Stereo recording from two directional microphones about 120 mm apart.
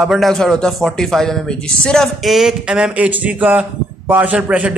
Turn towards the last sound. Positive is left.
turn(degrees=-10)  # may be behind; listen again after turning